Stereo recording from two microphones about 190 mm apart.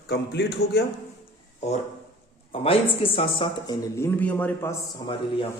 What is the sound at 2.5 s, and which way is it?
Speech, 30° left (ahead or behind).